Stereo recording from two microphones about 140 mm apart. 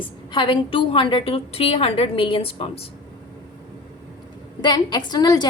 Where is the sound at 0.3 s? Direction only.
35° left (ahead or behind).